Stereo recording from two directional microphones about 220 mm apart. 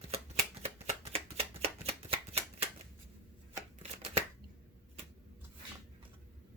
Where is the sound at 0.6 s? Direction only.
30° right (ahead or behind).